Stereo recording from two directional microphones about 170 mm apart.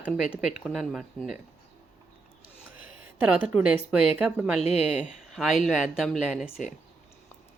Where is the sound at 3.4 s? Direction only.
5° right (ahead or behind).